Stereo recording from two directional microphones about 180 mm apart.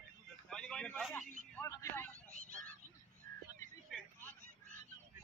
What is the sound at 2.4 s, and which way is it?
Honk, 50° right (ahead or behind).